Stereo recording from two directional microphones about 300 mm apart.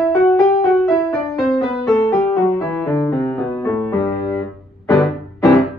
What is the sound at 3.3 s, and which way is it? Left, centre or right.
Music, centre.